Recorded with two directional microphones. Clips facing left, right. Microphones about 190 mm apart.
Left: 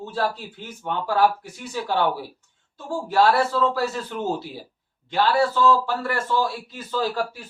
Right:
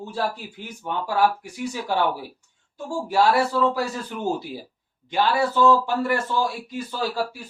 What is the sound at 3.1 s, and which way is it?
A man's voice, 15° right (ahead or behind).